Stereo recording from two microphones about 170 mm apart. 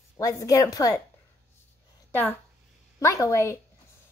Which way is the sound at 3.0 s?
15° left (ahead or behind).